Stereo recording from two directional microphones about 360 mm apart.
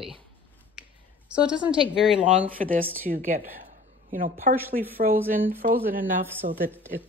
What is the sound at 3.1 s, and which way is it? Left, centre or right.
Speech, right.